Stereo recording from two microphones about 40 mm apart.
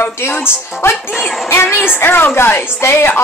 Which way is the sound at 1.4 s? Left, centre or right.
Left.